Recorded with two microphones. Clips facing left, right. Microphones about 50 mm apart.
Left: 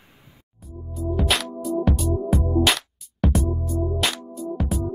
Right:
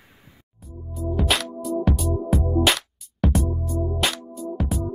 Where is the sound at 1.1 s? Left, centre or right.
Centre.